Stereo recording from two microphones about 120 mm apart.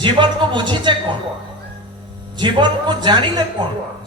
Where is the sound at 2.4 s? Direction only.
40° right (ahead or behind).